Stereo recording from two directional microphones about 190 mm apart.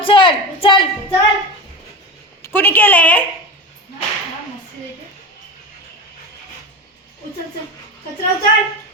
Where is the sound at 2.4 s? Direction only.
10° left (ahead or behind).